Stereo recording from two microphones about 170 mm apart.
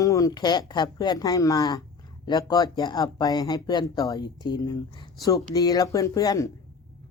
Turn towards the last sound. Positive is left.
turn(degrees=20)  # may be behind; listen again after turning